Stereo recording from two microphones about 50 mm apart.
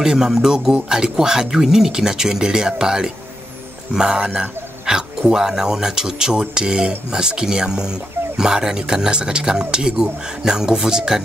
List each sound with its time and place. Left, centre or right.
0.0 s speech: centre